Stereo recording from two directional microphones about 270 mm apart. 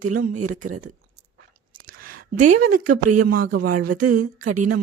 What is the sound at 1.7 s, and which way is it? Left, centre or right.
Whispering, right.